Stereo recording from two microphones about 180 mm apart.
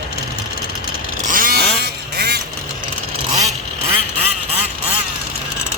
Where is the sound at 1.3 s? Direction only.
50° right (ahead or behind).